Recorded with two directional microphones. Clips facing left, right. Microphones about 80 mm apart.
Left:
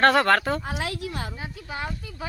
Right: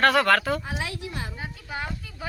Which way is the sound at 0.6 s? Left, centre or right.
Left.